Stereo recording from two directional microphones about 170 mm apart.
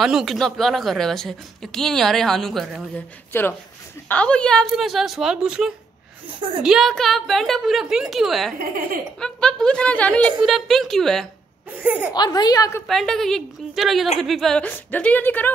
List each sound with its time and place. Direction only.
0.0 s speech: centre (ahead or behind)
4.1 s speech: 5° left (ahead or behind)
8.5 s speech: 55° right (ahead or behind)
9.2 s speech: 5° left (ahead or behind)
11.8 s speech: 10° right (ahead or behind)
12.1 s a woman's voice: 25° left (ahead or behind)
12.8 s a woman's voice: centre (ahead or behind)